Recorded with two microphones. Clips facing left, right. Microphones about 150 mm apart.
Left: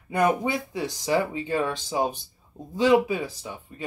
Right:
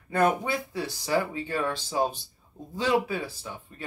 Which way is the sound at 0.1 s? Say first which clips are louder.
Left 1 dB; 15° left (ahead or behind).